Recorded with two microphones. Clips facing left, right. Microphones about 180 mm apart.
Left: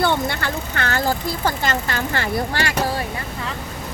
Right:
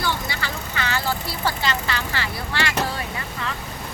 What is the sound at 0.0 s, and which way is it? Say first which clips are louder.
Speech: left 7 dB; 55° left (ahead or behind).